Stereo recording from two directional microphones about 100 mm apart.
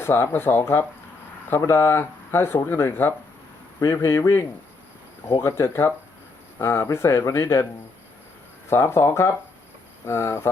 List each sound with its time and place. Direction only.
0.0 s speech: 25° left (ahead or behind)
8.7 s speech: 25° left (ahead or behind)